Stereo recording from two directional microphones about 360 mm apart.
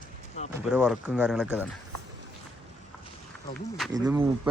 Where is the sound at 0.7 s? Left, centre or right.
Centre.